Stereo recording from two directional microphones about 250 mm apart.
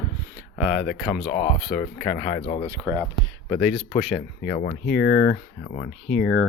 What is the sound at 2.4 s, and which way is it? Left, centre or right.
Speech, left.